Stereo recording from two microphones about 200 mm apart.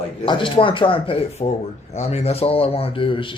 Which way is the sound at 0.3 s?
25° left (ahead or behind).